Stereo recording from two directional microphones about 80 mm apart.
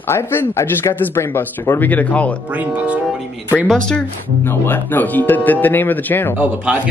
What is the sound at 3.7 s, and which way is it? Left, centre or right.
Speech, centre.